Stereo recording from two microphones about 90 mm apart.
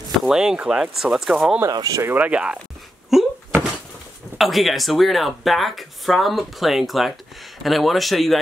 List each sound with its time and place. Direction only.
0.2 s speech: 5° right (ahead or behind)
1.7 s speech: 45° right (ahead or behind)
2.0 s speech: 20° right (ahead or behind)
3.1 s a sound: 5° right (ahead or behind)
4.4 s speech: centre (ahead or behind)